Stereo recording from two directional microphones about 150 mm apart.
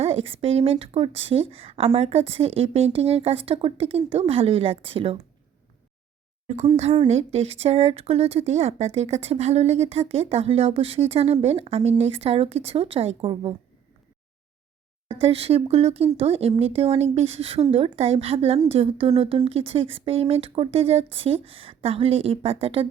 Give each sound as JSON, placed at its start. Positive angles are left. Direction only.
{"t": 0.0, "sound": "a woman's voice", "side_deg": -40}
{"t": 6.7, "sound": "speech", "side_deg": -45}
{"t": 15.0, "sound": "a woman's voice", "side_deg": -40}